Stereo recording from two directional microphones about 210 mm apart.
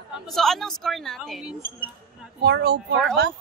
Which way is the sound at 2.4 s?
50° right (ahead or behind).